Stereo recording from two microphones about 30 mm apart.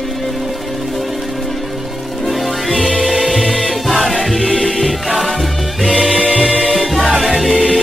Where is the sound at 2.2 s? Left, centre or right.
Centre.